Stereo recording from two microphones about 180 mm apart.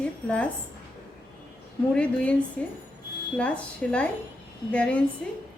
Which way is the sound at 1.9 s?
5° left (ahead or behind).